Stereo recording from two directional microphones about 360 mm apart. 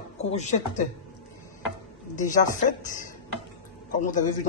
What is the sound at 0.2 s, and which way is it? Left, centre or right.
Speech, centre.